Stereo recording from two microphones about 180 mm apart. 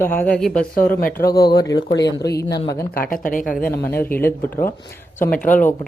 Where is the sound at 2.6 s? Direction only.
20° left (ahead or behind).